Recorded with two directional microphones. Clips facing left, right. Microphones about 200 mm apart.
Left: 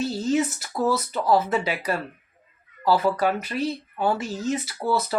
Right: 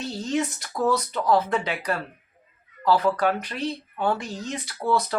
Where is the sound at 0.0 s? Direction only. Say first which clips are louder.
Left 4 dB; 5° left (ahead or behind).